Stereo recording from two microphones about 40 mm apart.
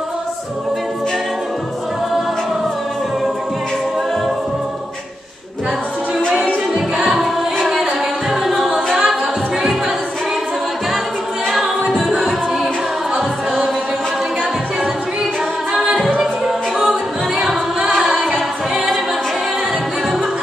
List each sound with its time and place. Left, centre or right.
8.5 s a capella: centre
12.1 s music: centre
15.7 s singing: right
17.9 s music: centre